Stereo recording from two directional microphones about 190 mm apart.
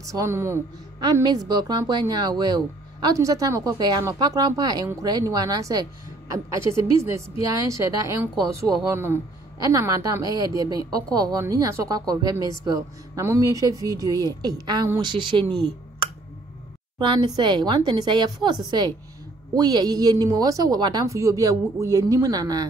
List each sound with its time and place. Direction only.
0.0 s a woman's voice: 15° right (ahead or behind)